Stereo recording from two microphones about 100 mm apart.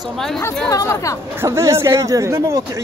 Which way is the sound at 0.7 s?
30° left (ahead or behind).